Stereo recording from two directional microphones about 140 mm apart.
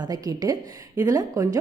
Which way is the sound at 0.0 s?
25° right (ahead or behind).